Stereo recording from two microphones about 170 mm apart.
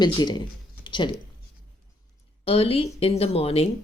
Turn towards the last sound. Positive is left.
turn(degrees=35)  # may be behind; listen again after turning